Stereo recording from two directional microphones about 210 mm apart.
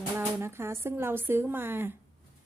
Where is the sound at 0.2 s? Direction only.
10° right (ahead or behind).